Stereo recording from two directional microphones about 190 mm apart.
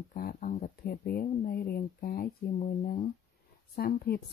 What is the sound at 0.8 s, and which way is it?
Speech, 55° left (ahead or behind).